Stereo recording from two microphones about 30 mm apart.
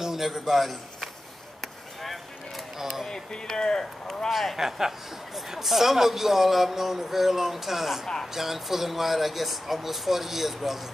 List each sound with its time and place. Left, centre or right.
0.0 s a man's voice: centre
2.8 s a sound: centre
3.1 s speech: left
4.3 s speech: centre
4.6 s speech: centre